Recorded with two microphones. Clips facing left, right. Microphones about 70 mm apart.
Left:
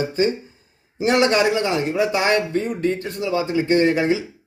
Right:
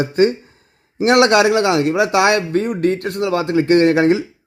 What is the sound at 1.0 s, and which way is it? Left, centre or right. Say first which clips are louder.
A man's voice: right 5 dB; right.